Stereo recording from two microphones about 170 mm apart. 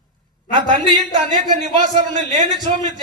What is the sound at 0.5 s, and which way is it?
Speech, 30° right (ahead or behind).